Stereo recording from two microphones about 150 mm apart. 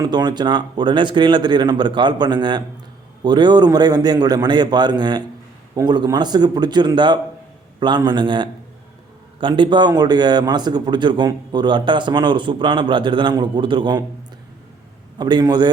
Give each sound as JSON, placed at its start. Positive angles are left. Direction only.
{"t": 0.0, "sound": "a man's voice", "side_deg": -30}
{"t": 15.2, "sound": "a man's voice", "side_deg": -30}